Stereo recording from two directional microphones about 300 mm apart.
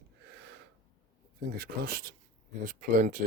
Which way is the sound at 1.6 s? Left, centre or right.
Right.